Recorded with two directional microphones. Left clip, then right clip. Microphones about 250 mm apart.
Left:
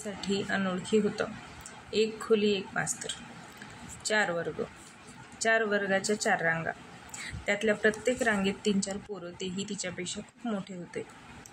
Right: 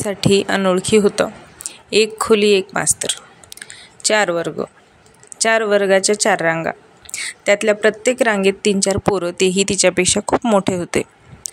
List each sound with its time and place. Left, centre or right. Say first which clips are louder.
0.0 s speech: right 18 dB; right